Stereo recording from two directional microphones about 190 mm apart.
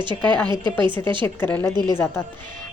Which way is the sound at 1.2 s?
10° left (ahead or behind).